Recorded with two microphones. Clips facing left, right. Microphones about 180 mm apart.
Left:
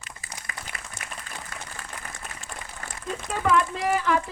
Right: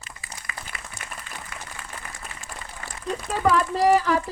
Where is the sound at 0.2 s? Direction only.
45° left (ahead or behind).